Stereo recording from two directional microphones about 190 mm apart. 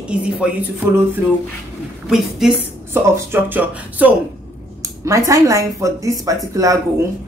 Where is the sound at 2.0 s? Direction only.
Centre (ahead or behind).